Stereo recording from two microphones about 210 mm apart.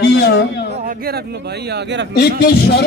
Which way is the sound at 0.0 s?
50° left (ahead or behind).